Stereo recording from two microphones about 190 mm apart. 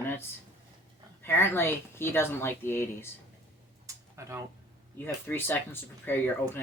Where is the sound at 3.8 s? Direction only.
15° right (ahead or behind).